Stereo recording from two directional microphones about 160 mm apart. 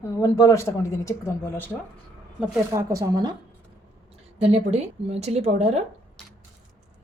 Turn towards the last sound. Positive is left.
turn(degrees=-40)  # may be behind; listen again after turning